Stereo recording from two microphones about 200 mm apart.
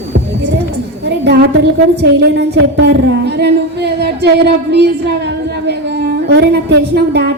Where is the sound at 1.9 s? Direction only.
55° right (ahead or behind).